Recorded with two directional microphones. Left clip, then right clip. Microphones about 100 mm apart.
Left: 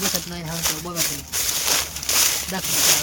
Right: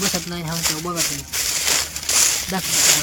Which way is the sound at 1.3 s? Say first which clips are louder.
Right 1 dB; centre (ahead or behind).